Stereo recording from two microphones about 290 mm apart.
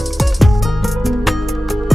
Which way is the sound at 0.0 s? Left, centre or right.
Centre.